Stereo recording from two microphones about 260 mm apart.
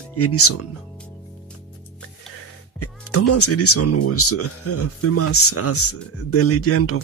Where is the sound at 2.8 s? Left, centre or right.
Left.